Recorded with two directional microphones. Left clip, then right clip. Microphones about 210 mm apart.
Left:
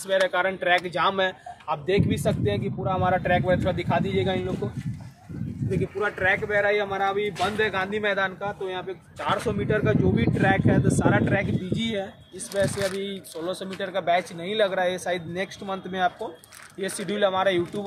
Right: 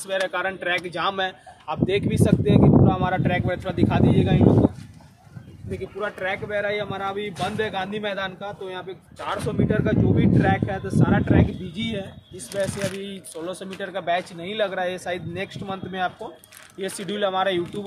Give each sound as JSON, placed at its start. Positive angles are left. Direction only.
{"t": 0.0, "sound": "speech", "side_deg": -10}
{"t": 5.9, "sound": "speech", "side_deg": 35}
{"t": 9.3, "sound": "speech", "side_deg": 45}
{"t": 11.7, "sound": "speech", "side_deg": 10}